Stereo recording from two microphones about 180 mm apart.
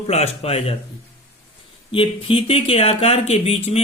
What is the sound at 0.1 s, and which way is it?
Speech, 35° left (ahead or behind).